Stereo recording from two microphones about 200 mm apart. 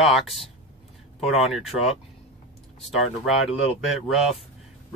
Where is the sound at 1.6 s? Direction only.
Centre (ahead or behind).